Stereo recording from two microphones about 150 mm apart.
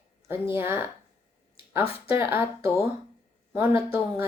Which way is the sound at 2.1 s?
15° right (ahead or behind).